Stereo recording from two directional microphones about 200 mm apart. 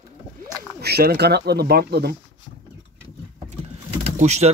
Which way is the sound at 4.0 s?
35° right (ahead or behind).